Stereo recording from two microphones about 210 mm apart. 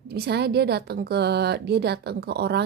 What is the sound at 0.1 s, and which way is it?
A woman's voice, 50° right (ahead or behind).